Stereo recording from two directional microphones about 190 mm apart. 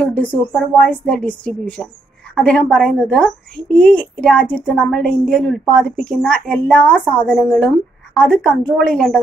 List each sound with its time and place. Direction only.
0.0 s a woman's voice: 10° left (ahead or behind)